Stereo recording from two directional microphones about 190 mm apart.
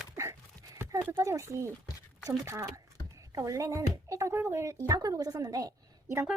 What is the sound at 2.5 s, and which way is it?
Speech, 15° right (ahead or behind).